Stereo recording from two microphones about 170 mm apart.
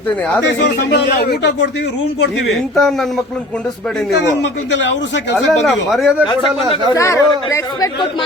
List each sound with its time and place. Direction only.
0.4 s speech: 85° left
2.7 s speech: centre (ahead or behind)
4.7 s a man's voice: 90° left
5.5 s speech: centre (ahead or behind)
6.9 s speech: 15° left (ahead or behind)